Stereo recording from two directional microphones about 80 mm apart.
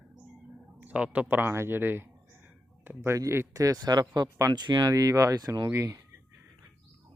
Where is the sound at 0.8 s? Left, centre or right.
Centre.